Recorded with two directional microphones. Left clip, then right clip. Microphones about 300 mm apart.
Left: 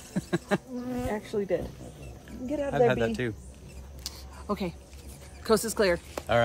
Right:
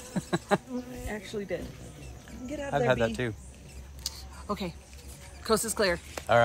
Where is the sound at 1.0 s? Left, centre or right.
Centre.